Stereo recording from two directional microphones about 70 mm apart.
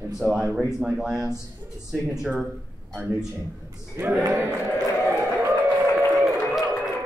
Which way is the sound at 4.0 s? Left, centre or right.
Right.